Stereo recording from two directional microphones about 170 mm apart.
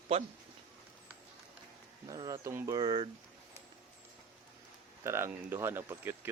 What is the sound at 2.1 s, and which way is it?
Speech, 20° right (ahead or behind).